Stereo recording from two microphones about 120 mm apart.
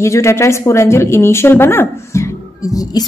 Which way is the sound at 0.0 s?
25° left (ahead or behind).